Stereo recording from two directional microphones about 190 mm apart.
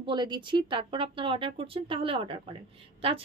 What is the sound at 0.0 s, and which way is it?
Speech, 25° right (ahead or behind).